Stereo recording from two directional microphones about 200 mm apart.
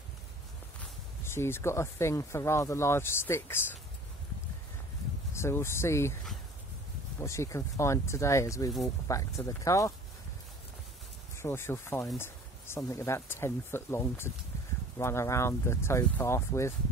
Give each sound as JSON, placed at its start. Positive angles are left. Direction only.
{"t": 1.2, "sound": "speech", "side_deg": 10}
{"t": 5.3, "sound": "speech", "side_deg": 15}
{"t": 7.2, "sound": "speech", "side_deg": 15}
{"t": 11.3, "sound": "speech", "side_deg": 10}